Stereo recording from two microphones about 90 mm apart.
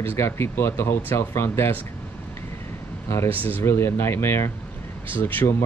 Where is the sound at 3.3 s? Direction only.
20° left (ahead or behind).